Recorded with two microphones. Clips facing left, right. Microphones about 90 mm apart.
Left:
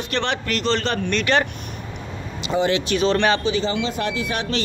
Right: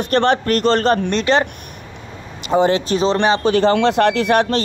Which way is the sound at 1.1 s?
25° right (ahead or behind).